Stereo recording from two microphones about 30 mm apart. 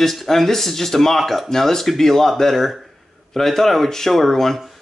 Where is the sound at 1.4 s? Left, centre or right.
Centre.